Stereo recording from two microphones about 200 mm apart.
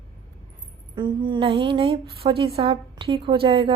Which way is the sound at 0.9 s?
25° right (ahead or behind).